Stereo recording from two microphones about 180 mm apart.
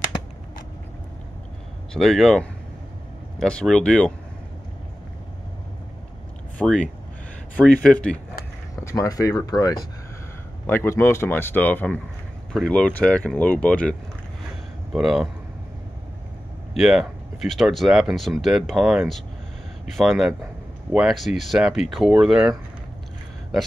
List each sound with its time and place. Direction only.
2.0 s speech: centre (ahead or behind)
6.6 s speech: 5° right (ahead or behind)
8.8 s speech: 15° left (ahead or behind); by 15.2 s centre (ahead or behind)
16.7 s speech: 5° right (ahead or behind)